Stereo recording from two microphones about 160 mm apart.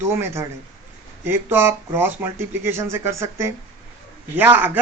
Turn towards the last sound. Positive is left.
turn(degrees=-10)  # may be behind; listen again after turning